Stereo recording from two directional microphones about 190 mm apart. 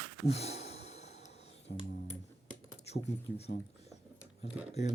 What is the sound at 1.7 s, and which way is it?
Music, 55° left (ahead or behind).